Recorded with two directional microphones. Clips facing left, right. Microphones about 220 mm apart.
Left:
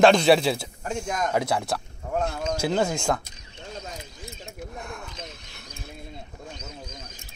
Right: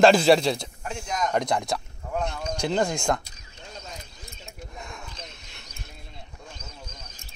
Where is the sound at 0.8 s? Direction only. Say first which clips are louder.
Left 2 dB; 50° left (ahead or behind).